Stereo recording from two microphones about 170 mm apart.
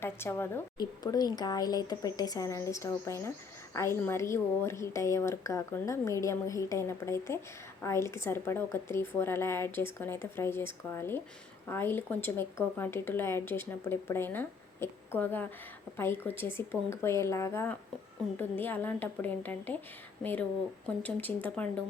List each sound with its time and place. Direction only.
0.0 s a woman's voice: 15° left (ahead or behind)
20.8 s speech: 10° left (ahead or behind)